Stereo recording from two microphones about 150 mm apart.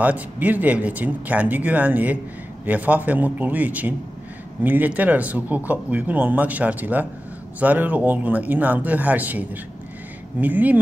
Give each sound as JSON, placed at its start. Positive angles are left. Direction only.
{"t": 0.0, "sound": "speech", "side_deg": -10}